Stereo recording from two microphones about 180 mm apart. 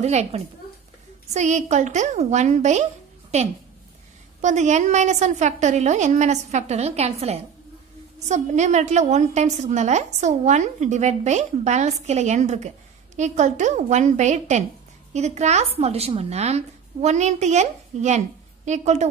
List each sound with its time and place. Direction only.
0.0 s a woman's voice: 35° right (ahead or behind)